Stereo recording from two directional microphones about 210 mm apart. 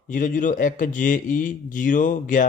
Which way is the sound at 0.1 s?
35° left (ahead or behind).